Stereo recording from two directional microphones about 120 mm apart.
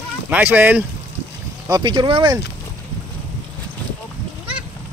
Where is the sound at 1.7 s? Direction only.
40° right (ahead or behind).